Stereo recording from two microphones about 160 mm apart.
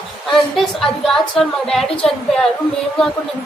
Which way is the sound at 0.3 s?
Centre (ahead or behind).